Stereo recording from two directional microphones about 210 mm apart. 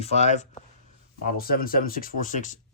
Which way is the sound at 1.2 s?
45° left (ahead or behind).